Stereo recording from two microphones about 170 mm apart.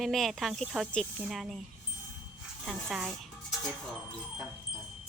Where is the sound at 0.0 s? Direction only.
Centre (ahead or behind).